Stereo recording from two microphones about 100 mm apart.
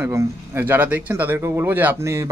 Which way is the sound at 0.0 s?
25° right (ahead or behind).